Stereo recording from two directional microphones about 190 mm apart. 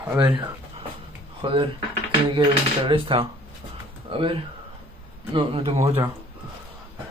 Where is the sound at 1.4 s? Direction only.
25° right (ahead or behind).